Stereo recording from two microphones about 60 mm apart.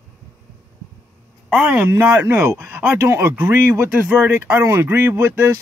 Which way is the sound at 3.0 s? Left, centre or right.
Right.